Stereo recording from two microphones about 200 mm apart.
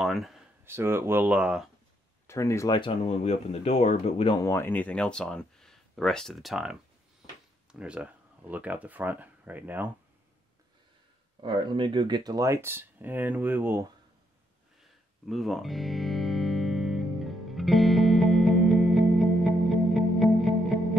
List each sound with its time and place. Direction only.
0.0 s a sound: centre (ahead or behind)
0.7 s speech: 10° right (ahead or behind)
2.2 s speech: 15° left (ahead or behind); by 4.4 s 30° left (ahead or behind)
4.4 s speech: 15° left (ahead or behind); by 6.8 s 5° right (ahead or behind)
7.8 s speech: 5° right (ahead or behind)
11.4 s speech: 25° right (ahead or behind)
14.8 s music: centre (ahead or behind)